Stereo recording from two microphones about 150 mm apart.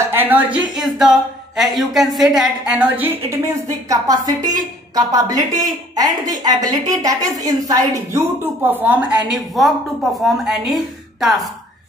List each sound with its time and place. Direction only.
0.1 s a woman's voice: 10° right (ahead or behind)
3.6 s a woman's voice: 25° right (ahead or behind)
8.6 s a woman's voice: 10° right (ahead or behind)
10.1 s a woman's voice: centre (ahead or behind)